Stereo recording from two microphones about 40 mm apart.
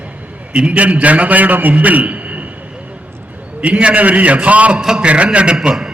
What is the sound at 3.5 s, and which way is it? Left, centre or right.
A man's voice, right.